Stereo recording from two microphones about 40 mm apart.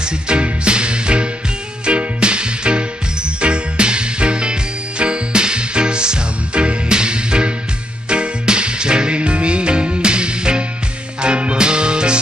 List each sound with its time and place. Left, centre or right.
0.0 s music: right